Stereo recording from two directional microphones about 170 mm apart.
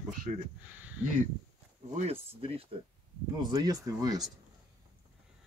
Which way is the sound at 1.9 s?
35° right (ahead or behind).